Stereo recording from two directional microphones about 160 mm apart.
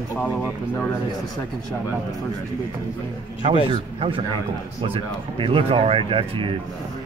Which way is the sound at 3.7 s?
35° right (ahead or behind).